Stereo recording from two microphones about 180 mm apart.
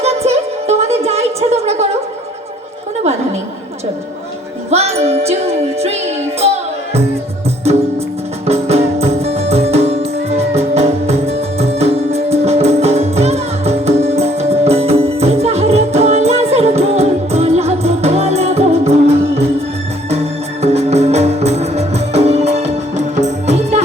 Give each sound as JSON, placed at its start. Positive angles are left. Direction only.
{"t": 0.0, "sound": "music", "side_deg": -35}
{"t": 4.7, "sound": "music", "side_deg": -35}
{"t": 8.4, "sound": "music", "side_deg": -35}